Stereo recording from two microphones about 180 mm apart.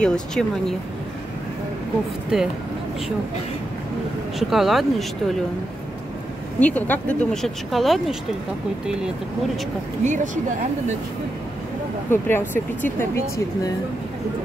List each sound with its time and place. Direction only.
0.0 s speech: 5° left (ahead or behind)
2.3 s speech: 5° right (ahead or behind)
4.4 s speech: centre (ahead or behind)
6.6 s speech: 10° left (ahead or behind)
10.0 s speech: 45° right (ahead or behind)
12.1 s speech: 10° left (ahead or behind)